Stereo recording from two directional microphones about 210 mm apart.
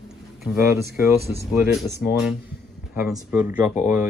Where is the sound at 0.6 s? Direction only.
10° right (ahead or behind).